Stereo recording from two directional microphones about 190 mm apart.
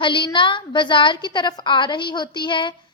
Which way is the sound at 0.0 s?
25° left (ahead or behind).